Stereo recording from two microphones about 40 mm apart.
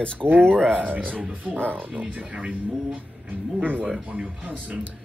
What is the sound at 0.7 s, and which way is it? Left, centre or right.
Speech, right.